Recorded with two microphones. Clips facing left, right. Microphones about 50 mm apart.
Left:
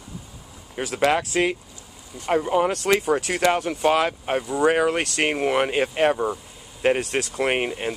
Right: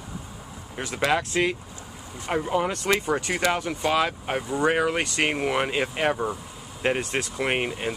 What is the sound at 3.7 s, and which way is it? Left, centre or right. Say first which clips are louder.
Speech: left 3 dB; left.